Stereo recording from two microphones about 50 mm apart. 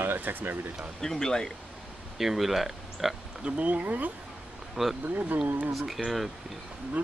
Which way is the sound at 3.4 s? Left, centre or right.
Right.